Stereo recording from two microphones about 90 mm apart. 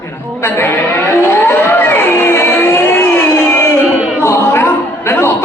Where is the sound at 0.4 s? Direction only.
30° left (ahead or behind).